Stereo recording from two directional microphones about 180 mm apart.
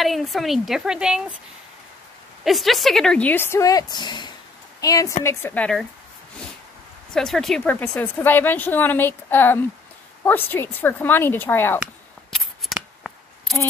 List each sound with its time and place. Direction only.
0.0 s a woman's voice: centre (ahead or behind)
2.4 s a woman's voice: centre (ahead or behind)
7.1 s a woman's voice: 5° left (ahead or behind)
12.3 s scissors: centre (ahead or behind)